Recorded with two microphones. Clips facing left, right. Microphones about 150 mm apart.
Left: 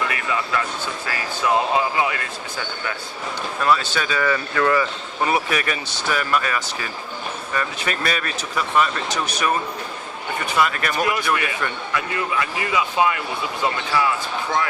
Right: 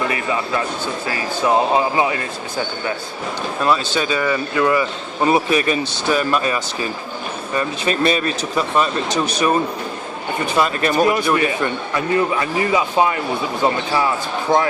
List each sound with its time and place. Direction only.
0.1 s a sound: 25° right (ahead or behind)
1.0 s speech: 30° right (ahead or behind)
5.2 s speech: 25° right (ahead or behind)